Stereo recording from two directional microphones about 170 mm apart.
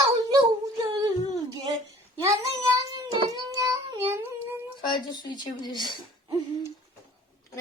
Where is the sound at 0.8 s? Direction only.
20° right (ahead or behind).